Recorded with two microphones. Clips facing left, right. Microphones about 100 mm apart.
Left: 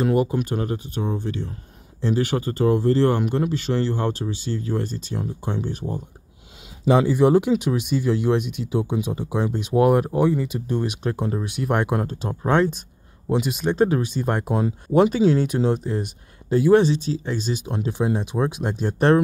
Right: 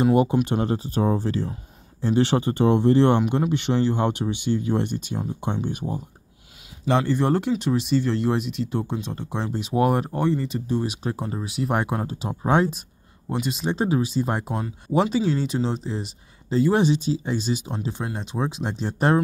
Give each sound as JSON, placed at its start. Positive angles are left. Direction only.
{"t": 0.0, "sound": "speech", "side_deg": -20}
{"t": 6.9, "sound": "speech", "side_deg": 10}
{"t": 13.3, "sound": "speech", "side_deg": 5}
{"t": 13.7, "sound": "speech", "side_deg": -5}
{"t": 16.7, "sound": "speech", "side_deg": -10}
{"t": 17.9, "sound": "speech", "side_deg": 15}
{"t": 18.3, "sound": "speech", "side_deg": 0}